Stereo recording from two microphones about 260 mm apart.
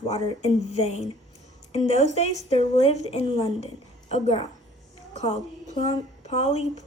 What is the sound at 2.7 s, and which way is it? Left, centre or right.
Speech, left.